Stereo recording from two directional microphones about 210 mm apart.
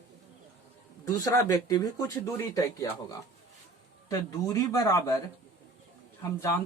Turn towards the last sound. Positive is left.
turn(degrees=15)  # may be behind; listen again after turning